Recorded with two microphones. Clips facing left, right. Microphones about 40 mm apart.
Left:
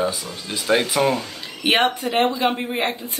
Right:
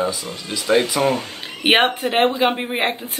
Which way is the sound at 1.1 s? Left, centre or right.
Right.